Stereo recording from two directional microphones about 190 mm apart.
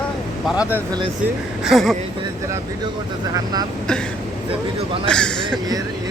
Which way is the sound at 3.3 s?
20° right (ahead or behind).